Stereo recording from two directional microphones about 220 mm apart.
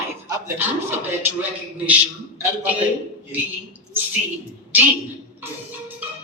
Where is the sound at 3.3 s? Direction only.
10° right (ahead or behind).